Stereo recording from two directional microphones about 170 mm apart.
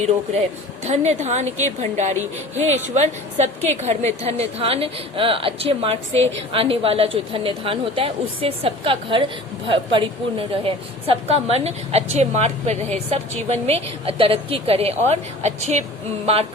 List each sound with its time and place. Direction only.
0.9 s a woman's voice: 40° right (ahead or behind)